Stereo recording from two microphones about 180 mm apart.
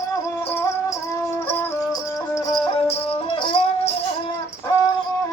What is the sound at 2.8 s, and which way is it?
Music, 30° left (ahead or behind).